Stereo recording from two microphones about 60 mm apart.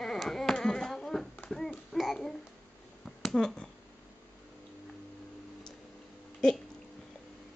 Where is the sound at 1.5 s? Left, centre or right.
Centre.